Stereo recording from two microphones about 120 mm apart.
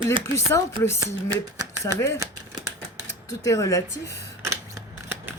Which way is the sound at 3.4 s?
25° left (ahead or behind).